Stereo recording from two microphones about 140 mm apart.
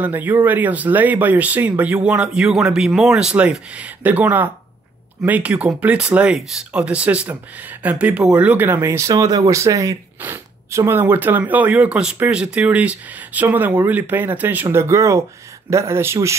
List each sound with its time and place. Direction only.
0.0 s speech: 15° right (ahead or behind)